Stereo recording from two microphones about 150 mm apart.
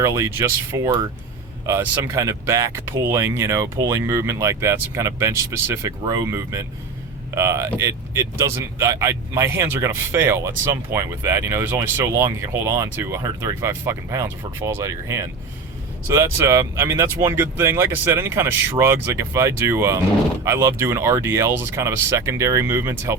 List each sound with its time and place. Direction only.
0.0 s speech: 20° right (ahead or behind)